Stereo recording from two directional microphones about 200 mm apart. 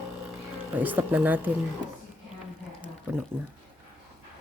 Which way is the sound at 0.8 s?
10° right (ahead or behind).